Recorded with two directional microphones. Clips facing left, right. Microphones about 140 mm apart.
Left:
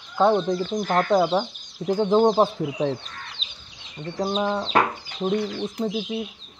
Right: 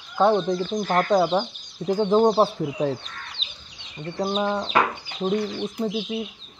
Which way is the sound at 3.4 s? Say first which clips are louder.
Right 1 dB; 40° left (ahead or behind).